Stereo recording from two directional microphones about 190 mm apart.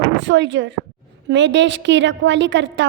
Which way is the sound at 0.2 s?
70° right (ahead or behind).